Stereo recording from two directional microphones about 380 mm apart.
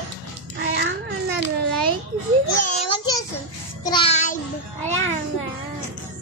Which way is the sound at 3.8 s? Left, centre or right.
Centre.